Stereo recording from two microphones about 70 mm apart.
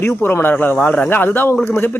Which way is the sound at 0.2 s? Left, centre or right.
Left.